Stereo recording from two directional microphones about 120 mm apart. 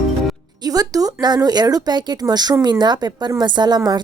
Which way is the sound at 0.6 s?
30° right (ahead or behind).